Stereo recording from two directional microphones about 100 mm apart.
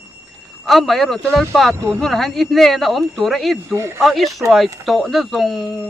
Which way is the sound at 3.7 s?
25° right (ahead or behind).